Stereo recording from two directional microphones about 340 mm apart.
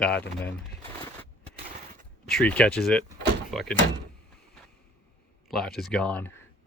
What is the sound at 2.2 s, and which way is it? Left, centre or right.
Speech, centre.